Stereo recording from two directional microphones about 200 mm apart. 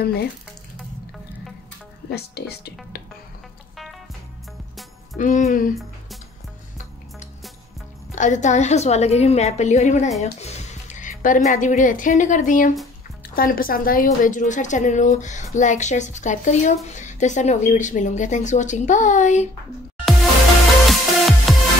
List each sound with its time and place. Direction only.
0.0 s speech: 55° left (ahead or behind)
2.0 s speech: 55° left (ahead or behind)
5.1 s a woman's voice: 35° left (ahead or behind)
8.1 s a woman's voice: 40° left (ahead or behind)
20.9 s music: centre (ahead or behind)